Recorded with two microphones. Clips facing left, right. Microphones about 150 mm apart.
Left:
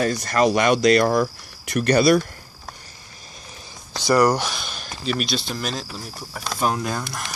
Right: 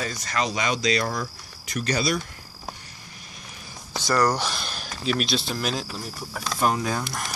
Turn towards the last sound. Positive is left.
turn(degrees=0)  # may be behind; listen again after turning